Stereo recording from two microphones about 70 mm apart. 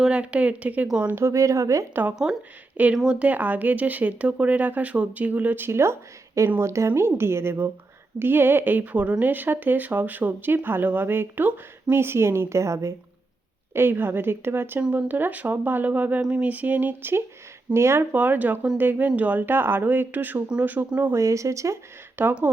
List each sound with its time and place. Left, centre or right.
0.0 s speech: centre
1.0 s speech: right
2.2 s speech: centre; by 12.9 s right
13.7 s speech: right
18.1 s speech: right
21.1 s speech: right
22.1 s speech: right